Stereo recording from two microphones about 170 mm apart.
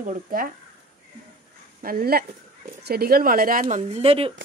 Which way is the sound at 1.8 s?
60° right (ahead or behind).